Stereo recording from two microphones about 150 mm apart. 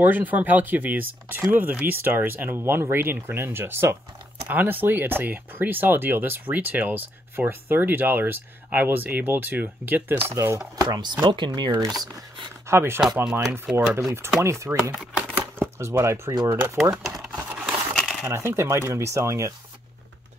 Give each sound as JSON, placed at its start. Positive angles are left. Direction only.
{"t": 0.0, "sound": "speech", "side_deg": -10}
{"t": 13.2, "sound": "speech", "side_deg": -5}
{"t": 15.0, "sound": "a sound", "side_deg": -5}
{"t": 15.8, "sound": "speech", "side_deg": -15}
{"t": 16.9, "sound": "coin", "side_deg": 0}
{"t": 18.2, "sound": "speech", "side_deg": -15}